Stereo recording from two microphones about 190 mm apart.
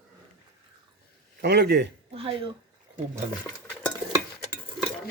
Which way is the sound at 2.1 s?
30° right (ahead or behind).